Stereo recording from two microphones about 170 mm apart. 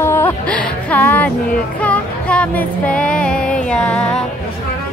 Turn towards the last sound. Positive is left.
turn(degrees=5)  # may be behind; listen again after turning